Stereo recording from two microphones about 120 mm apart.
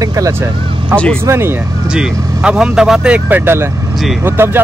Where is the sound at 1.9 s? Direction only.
5° right (ahead or behind).